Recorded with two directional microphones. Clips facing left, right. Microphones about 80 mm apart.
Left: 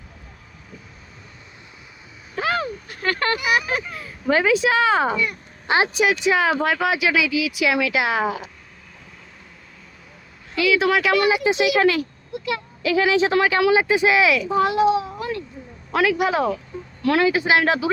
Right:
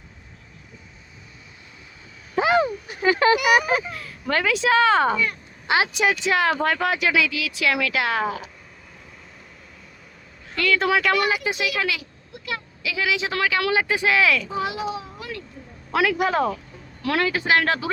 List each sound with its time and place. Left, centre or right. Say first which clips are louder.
2.3 s a sound: right 4 dB; centre
3.7 s a man's voice: right 3 dB; centre
4.0 s speech: left 4 dB; centre
5.6 s speech: left 2 dB; left
6.0 s speech: left 2 dB; centre
10.6 s a man's voice: left 2 dB; centre
11.3 s speech: left 6 dB; left
12.8 s speech: left 8 dB; left; by 14.5 s centre
14.5 s a child's voice: left 9 dB; left
15.9 s a man's voice: left 2 dB; centre
17.2 s speech: left 1 dB; centre